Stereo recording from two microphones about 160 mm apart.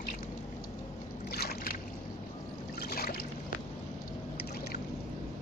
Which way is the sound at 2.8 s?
70° left (ahead or behind).